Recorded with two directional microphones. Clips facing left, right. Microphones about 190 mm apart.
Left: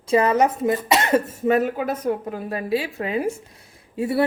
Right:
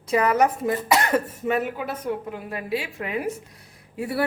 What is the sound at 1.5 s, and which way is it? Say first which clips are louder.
A woman's voice: left 7 dB; 40° left (ahead or behind).